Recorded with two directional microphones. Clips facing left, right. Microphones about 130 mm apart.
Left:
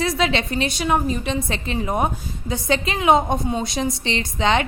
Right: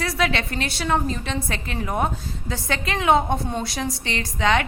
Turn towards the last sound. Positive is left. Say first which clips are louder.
# left 1 dB
turn(degrees=25)  # may be behind; listen again after turning